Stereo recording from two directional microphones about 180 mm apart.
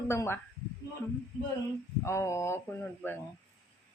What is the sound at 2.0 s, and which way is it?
A woman's voice, 15° left (ahead or behind).